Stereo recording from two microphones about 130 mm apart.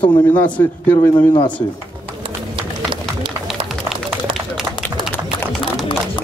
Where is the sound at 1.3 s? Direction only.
35° left (ahead or behind).